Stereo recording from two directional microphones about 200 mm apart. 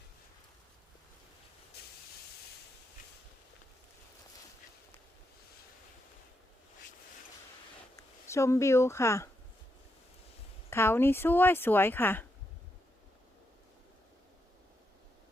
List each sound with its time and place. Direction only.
7.9 s speech: 15° left (ahead or behind)
10.7 s speech: 10° left (ahead or behind)